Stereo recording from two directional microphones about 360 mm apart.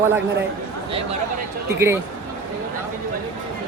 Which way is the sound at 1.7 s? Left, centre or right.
Centre.